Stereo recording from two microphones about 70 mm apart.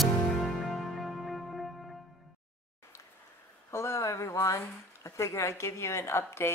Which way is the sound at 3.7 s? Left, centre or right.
Left.